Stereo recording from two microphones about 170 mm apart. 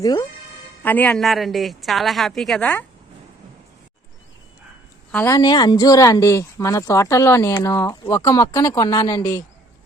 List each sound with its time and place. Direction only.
0.0 s speech: 20° left (ahead or behind)
0.8 s a woman's voice: 10° left (ahead or behind)
5.1 s speech: 15° left (ahead or behind)